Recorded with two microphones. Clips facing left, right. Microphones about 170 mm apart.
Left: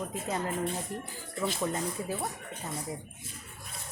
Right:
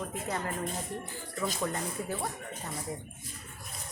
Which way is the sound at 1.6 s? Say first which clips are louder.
Left 2 dB; 15° left (ahead or behind).